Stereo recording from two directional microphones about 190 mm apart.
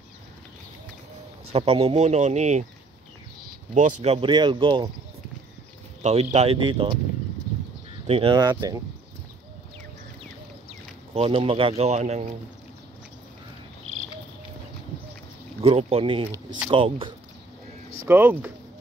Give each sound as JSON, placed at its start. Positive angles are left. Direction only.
{"t": 1.5, "sound": "speech", "side_deg": -30}
{"t": 3.7, "sound": "speech", "side_deg": -35}
{"t": 6.0, "sound": "speech", "side_deg": -35}
{"t": 8.1, "sound": "speech", "side_deg": -25}
{"t": 11.1, "sound": "speech", "side_deg": -30}
{"t": 15.6, "sound": "speech", "side_deg": -30}
{"t": 18.0, "sound": "speech", "side_deg": -10}